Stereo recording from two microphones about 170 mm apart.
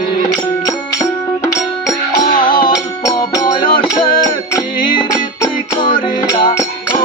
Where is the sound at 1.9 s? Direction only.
25° left (ahead or behind).